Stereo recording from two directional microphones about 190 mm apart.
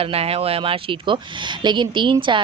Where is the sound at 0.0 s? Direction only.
30° right (ahead or behind).